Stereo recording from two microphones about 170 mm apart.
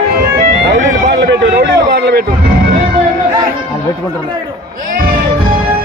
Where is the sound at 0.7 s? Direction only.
90° right.